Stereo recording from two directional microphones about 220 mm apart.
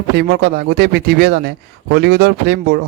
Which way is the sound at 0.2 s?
45° right (ahead or behind).